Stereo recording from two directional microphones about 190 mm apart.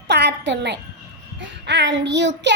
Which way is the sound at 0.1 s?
65° right (ahead or behind).